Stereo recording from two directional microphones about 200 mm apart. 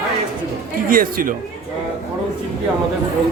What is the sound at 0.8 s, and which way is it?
Speech, 45° right (ahead or behind).